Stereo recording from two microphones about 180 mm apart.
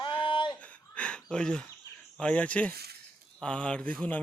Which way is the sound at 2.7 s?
60° right (ahead or behind).